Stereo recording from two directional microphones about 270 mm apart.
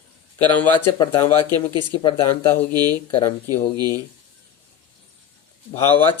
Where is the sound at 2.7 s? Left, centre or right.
Centre.